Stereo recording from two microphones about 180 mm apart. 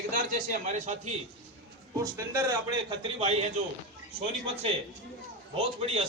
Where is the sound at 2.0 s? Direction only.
20° right (ahead or behind).